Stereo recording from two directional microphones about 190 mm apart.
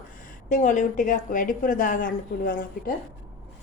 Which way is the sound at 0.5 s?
40° left (ahead or behind).